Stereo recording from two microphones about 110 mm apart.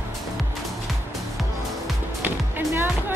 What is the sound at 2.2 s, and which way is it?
Music, 20° right (ahead or behind).